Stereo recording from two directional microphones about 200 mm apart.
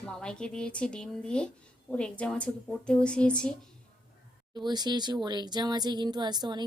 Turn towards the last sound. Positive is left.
turn(degrees=-20)  # may be behind; listen again after turning